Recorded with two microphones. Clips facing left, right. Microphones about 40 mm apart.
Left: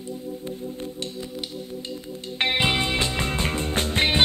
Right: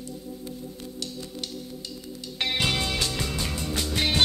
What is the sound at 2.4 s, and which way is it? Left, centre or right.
Music, left.